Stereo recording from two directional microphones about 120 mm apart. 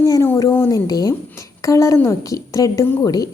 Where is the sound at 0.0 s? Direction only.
25° left (ahead or behind).